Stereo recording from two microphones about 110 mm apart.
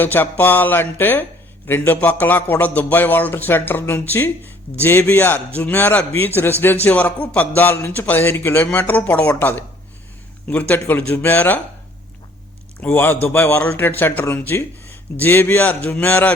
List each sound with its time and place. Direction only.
0.0 s speech: 20° left (ahead or behind)
12.8 s speech: 15° left (ahead or behind)